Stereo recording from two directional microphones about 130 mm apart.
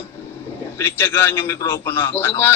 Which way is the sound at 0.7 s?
20° left (ahead or behind).